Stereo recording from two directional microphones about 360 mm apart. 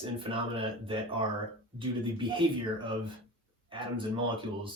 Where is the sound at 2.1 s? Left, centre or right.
Centre.